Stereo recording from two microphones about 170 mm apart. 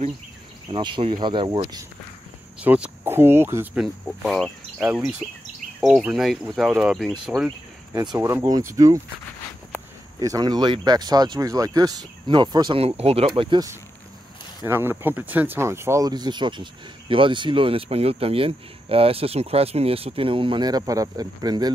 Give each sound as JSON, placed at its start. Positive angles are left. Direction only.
{"t": 0.7, "sound": "speech", "side_deg": -30}
{"t": 2.6, "sound": "speech", "side_deg": -10}
{"t": 3.8, "sound": "speech", "side_deg": 0}
{"t": 7.9, "sound": "speech", "side_deg": -20}
{"t": 10.1, "sound": "speech", "side_deg": -20}
{"t": 14.6, "sound": "speech", "side_deg": -15}